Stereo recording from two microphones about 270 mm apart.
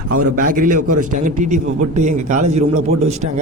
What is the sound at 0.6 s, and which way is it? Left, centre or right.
A man's voice, right.